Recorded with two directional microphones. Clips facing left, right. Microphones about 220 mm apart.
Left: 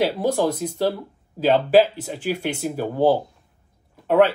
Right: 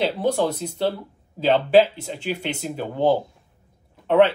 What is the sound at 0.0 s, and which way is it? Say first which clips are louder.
Speech: left 1 dB; 10° left (ahead or behind).